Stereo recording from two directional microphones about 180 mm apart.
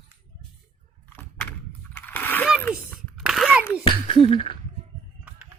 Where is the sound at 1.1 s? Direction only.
10° left (ahead or behind).